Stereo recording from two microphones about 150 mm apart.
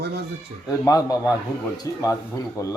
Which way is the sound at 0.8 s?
25° left (ahead or behind).